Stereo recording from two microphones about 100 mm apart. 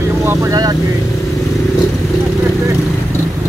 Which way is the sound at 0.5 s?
40° right (ahead or behind).